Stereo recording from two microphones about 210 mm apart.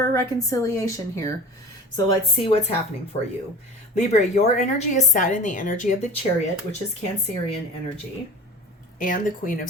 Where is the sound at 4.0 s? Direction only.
35° left (ahead or behind).